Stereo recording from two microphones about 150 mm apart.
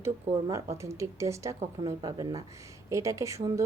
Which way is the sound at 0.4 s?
20° right (ahead or behind).